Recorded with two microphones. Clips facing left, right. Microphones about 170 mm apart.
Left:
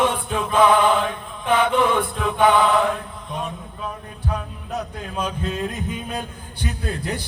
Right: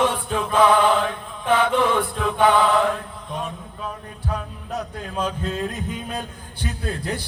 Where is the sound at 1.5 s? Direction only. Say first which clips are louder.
Even; 15° left (ahead or behind).